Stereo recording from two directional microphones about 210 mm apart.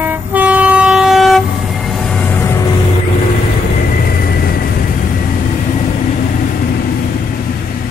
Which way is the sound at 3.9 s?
45° left (ahead or behind).